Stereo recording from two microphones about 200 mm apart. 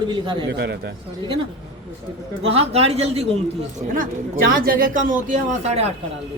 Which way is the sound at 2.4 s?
30° right (ahead or behind).